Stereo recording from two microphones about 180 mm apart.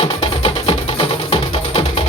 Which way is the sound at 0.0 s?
30° left (ahead or behind).